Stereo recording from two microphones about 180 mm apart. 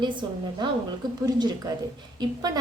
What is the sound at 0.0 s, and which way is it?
A woman's voice, 25° right (ahead or behind).